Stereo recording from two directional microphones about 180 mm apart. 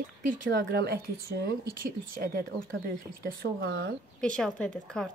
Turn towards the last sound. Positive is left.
turn(degrees=5)  # may be behind; listen again after turning